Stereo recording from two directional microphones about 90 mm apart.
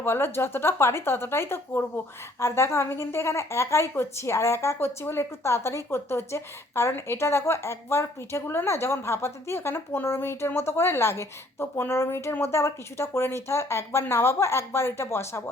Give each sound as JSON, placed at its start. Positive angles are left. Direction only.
{"t": 0.0, "sound": "a woman's voice", "side_deg": 25}